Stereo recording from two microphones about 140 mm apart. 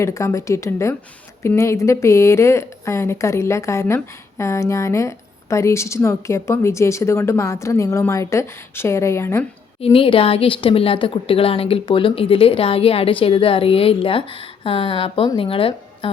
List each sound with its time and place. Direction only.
0.0 s speech: 20° left (ahead or behind)
9.8 s a woman's voice: 40° left (ahead or behind)